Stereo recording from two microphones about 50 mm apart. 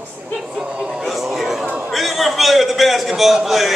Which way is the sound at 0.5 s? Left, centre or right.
Centre.